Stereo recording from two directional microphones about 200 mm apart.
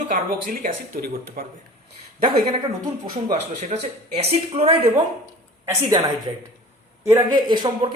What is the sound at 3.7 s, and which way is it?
Speech, 35° right (ahead or behind).